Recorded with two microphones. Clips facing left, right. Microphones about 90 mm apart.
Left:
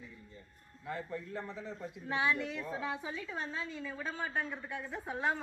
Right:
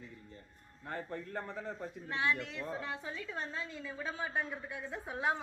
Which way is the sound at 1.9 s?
5° left (ahead or behind).